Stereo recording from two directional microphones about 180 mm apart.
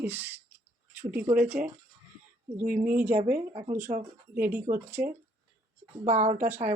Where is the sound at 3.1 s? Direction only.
50° right (ahead or behind).